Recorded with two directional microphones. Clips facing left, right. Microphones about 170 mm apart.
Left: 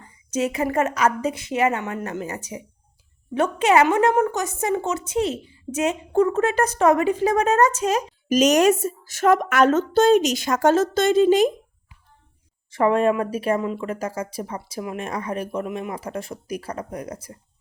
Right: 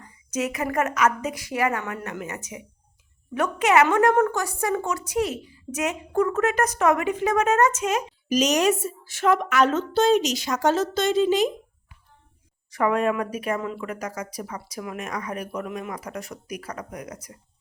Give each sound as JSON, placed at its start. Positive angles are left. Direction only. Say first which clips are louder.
{"t": 0.0, "sound": "a woman's voice", "louder": "left 3 dB", "side_deg": 30}
{"t": 4.1, "sound": "a woman's voice", "louder": "even", "side_deg": 15}
{"t": 8.3, "sound": "a woman's voice", "louder": "left 4 dB", "side_deg": 50}
{"t": 12.7, "sound": "a woman's voice", "louder": "left 4 dB", "side_deg": 30}
{"t": 13.6, "sound": "a woman's voice", "louder": "left 4 dB", "side_deg": 20}